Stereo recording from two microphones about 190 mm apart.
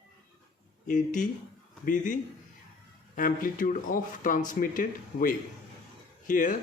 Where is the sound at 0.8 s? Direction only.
40° left (ahead or behind).